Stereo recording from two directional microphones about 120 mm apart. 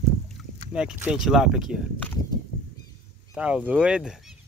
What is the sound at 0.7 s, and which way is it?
Speech, 10° right (ahead or behind).